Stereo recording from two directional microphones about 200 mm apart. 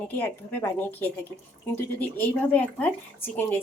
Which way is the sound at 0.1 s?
10° left (ahead or behind).